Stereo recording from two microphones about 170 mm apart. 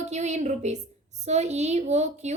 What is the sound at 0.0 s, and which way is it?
A woman's voice, 40° right (ahead or behind).